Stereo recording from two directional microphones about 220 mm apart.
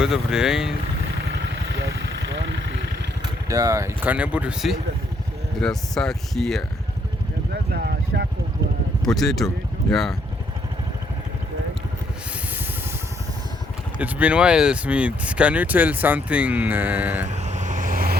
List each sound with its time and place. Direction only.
0.0 s speech: 5° right (ahead or behind)
1.8 s vehicle: 55° right (ahead or behind)
3.5 s speech: 15° right (ahead or behind); by 6.7 s centre (ahead or behind)
7.5 s a sound: 45° right (ahead or behind)
9.0 s speech: centre (ahead or behind)
14.0 s speech: 5° right (ahead or behind)
17.2 s vehicle: 30° right (ahead or behind)